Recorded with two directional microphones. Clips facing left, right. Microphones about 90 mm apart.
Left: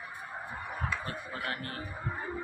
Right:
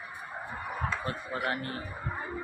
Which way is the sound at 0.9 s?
25° right (ahead or behind).